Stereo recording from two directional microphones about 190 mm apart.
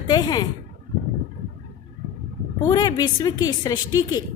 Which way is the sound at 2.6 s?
20° left (ahead or behind).